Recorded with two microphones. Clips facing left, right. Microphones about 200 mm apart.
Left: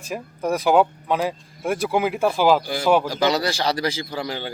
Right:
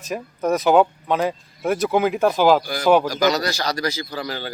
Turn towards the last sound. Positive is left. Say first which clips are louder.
# even
turn(degrees=25)  # may be behind; listen again after turning